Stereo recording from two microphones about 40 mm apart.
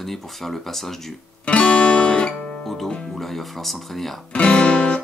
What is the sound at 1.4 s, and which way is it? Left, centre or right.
Music, left.